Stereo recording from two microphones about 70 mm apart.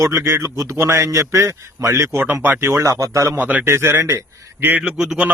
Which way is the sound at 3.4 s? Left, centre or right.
Right.